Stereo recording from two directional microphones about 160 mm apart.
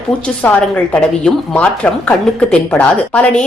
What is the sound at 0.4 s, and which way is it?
Speech, 10° left (ahead or behind).